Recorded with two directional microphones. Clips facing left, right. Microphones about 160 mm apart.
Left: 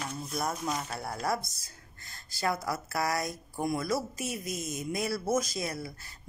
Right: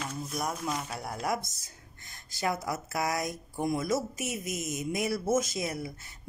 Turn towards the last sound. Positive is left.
turn(degrees=-20)  # may be behind; listen again after turning